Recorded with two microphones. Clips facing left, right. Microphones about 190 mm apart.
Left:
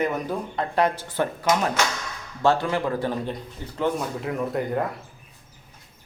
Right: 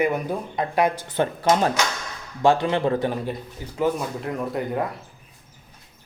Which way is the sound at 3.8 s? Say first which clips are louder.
Right 2 dB; centre (ahead or behind).